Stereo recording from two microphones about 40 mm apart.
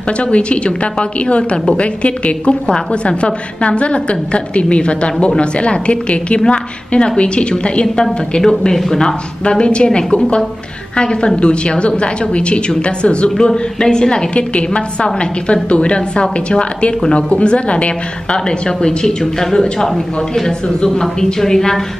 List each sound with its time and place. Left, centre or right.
0.2 s a woman's voice: left
7.8 s a woman's voice: centre
9.4 s a woman's voice: left
13.5 s a woman's voice: centre